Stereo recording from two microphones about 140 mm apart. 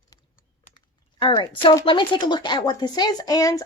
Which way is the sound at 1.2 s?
25° left (ahead or behind).